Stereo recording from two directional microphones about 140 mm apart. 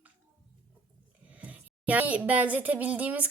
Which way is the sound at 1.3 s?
10° right (ahead or behind).